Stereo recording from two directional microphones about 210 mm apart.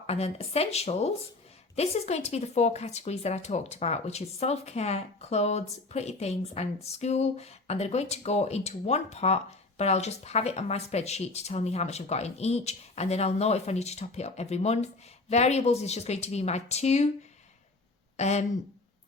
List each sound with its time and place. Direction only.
0.1 s speech: 30° left (ahead or behind)
18.2 s speech: 30° left (ahead or behind)